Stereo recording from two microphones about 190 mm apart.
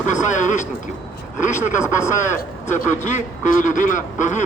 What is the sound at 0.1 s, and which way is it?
Speech, 40° left (ahead or behind).